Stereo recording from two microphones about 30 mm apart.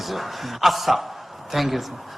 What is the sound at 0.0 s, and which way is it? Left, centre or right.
A man's voice, centre.